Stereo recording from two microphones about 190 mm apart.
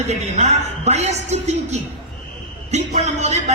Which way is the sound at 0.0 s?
35° right (ahead or behind).